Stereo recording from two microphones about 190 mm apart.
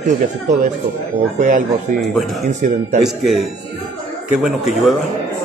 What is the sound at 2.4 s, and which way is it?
Speech, 45° right (ahead or behind).